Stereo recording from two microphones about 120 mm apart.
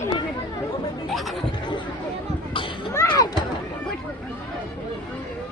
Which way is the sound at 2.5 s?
45° left (ahead or behind).